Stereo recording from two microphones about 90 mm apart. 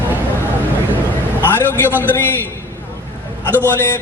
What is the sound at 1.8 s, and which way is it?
Speech, 20° right (ahead or behind).